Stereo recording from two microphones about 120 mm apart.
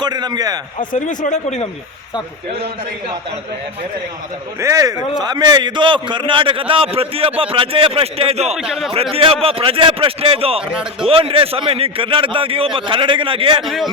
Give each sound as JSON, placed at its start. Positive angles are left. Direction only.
{"t": 0.0, "sound": "a man's voice", "side_deg": -35}
{"t": 0.9, "sound": "speech", "side_deg": 90}
{"t": 4.6, "sound": "a man's voice", "side_deg": -25}
{"t": 8.5, "sound": "speech", "side_deg": -5}
{"t": 9.1, "sound": "a man's voice", "side_deg": -55}
{"t": 13.6, "sound": "speech", "side_deg": 0}